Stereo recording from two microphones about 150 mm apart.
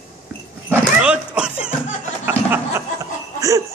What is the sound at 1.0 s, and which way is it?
Dog, 5° right (ahead or behind).